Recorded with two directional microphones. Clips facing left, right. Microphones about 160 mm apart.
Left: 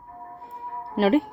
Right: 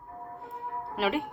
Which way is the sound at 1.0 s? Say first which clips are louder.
Left 9 dB; 40° left (ahead or behind).